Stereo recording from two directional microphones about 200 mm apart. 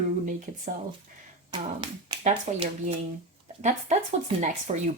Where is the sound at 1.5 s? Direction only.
20° right (ahead or behind).